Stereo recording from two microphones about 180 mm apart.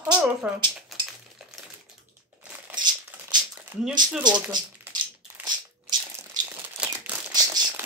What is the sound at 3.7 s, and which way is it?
Speech, 15° right (ahead or behind).